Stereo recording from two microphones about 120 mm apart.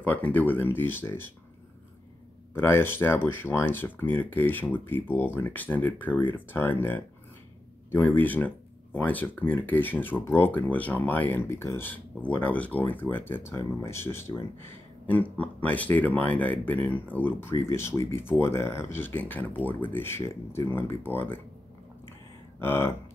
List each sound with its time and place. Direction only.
0.0 s speech: 15° left (ahead or behind)
2.5 s speech: 20° left (ahead or behind)
22.6 s speech: 20° left (ahead or behind)